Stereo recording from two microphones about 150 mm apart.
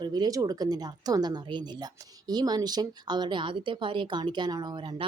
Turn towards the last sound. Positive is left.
turn(degrees=-30)  # may be behind; listen again after turning